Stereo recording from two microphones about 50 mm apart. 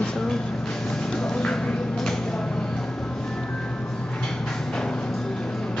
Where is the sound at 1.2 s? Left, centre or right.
Centre.